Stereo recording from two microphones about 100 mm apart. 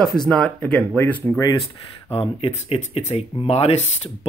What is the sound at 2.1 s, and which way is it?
Speech, 70° left (ahead or behind).